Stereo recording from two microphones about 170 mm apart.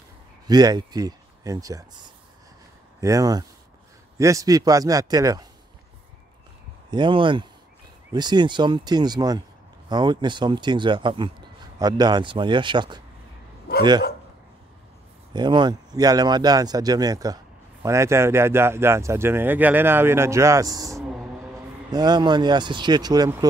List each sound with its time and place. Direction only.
0.5 s speech: 25° right (ahead or behind)
6.9 s speech: 30° right (ahead or behind)
15.3 s speech: 25° right (ahead or behind)